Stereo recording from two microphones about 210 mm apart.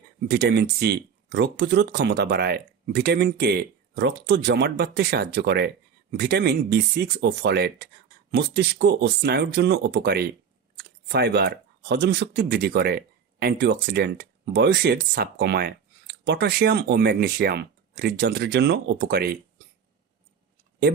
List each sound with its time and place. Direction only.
0.3 s speech: 50° right (ahead or behind)